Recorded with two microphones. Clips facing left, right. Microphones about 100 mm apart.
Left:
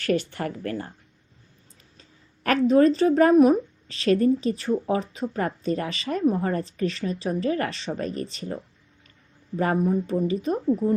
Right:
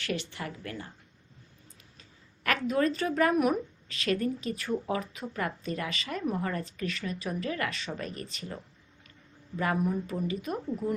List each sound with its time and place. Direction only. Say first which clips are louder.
0.0 s speech: left 10 dB; 45° left (ahead or behind)
2.0 s speech: left 6 dB; 35° left (ahead or behind)
9.6 s speech: left 6 dB; 35° left (ahead or behind)